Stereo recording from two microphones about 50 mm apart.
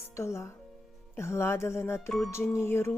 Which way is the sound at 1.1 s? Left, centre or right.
Left.